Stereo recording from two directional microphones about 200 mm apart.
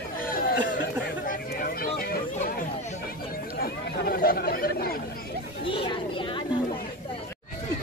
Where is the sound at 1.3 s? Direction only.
50° left (ahead or behind).